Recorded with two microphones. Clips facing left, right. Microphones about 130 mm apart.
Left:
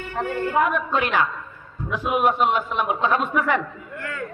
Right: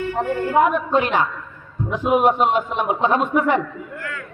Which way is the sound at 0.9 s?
40° right (ahead or behind).